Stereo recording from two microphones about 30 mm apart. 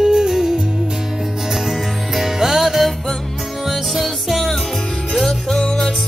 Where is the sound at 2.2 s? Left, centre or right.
Centre.